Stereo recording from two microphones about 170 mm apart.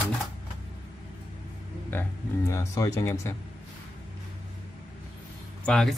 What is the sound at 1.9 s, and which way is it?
Speech, 10° left (ahead or behind).